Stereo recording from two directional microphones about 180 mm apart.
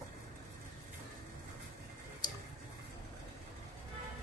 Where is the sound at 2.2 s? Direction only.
25° left (ahead or behind).